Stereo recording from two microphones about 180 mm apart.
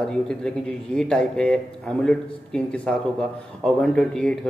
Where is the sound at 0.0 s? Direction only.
5° left (ahead or behind).